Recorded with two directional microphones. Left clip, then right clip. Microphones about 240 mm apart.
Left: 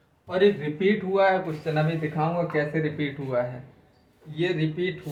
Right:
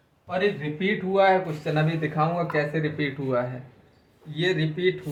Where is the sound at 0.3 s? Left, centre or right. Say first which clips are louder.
Left 3 dB; centre.